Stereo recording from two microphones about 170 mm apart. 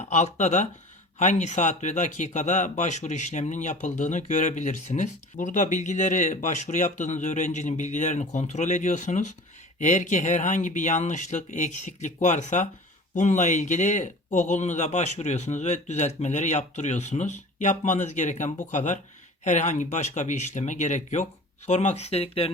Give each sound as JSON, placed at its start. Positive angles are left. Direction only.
{"t": 0.0, "sound": "speech", "side_deg": 40}